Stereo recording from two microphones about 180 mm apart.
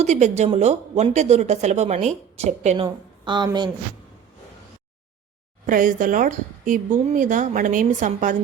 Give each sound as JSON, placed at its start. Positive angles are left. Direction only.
{"t": 0.0, "sound": "speech", "side_deg": -40}
{"t": 2.8, "sound": "speech", "side_deg": -25}
{"t": 5.6, "sound": "a woman's voice", "side_deg": -50}